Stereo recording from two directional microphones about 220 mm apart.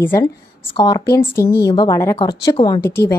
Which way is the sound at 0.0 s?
10° left (ahead or behind).